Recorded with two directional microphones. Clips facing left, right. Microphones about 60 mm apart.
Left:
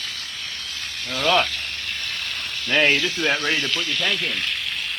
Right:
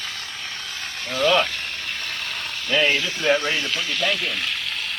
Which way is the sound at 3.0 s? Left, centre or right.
Right.